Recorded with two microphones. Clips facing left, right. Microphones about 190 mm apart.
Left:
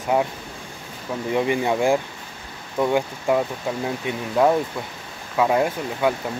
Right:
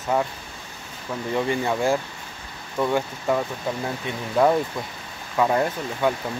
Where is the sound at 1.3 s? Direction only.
15° left (ahead or behind).